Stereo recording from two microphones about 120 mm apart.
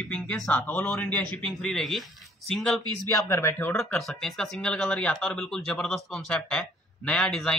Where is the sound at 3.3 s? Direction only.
20° left (ahead or behind).